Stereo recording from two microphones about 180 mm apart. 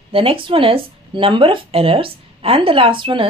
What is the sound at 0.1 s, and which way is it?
Speech, 30° right (ahead or behind).